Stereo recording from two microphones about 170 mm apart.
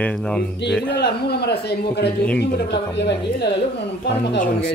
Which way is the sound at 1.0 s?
75° left (ahead or behind).